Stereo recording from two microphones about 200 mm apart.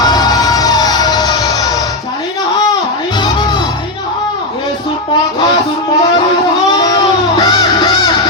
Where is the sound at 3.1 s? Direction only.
20° left (ahead or behind).